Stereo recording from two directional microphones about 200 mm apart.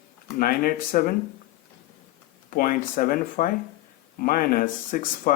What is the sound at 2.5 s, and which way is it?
Speech, 40° left (ahead or behind).